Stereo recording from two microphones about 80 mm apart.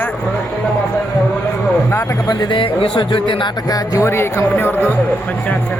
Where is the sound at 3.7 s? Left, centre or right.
Left.